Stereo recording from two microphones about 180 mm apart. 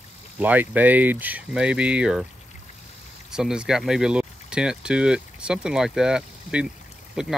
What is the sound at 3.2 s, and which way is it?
Speech, 5° right (ahead or behind).